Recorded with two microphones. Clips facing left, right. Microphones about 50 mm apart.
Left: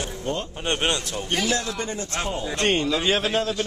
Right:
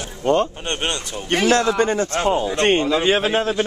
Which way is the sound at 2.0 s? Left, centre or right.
Right.